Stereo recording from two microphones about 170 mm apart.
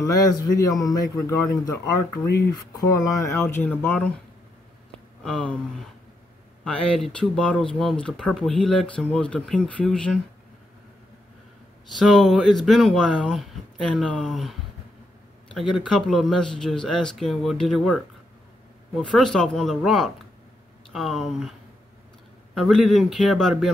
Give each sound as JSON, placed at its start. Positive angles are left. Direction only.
{"t": 0.0, "sound": "a man's voice", "side_deg": 20}
{"t": 5.2, "sound": "speech", "side_deg": 5}
{"t": 12.0, "sound": "speech", "side_deg": 0}